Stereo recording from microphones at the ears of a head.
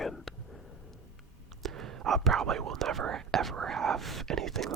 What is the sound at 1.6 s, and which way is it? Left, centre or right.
Speech, right.